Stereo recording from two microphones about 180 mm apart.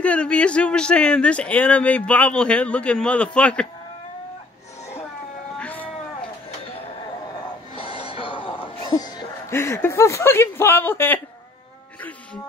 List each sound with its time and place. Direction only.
0.0 s speech: 5° left (ahead or behind)
5.6 s cat: 10° left (ahead or behind)
7.7 s music: 30° left (ahead or behind)
9.5 s speech: 15° left (ahead or behind)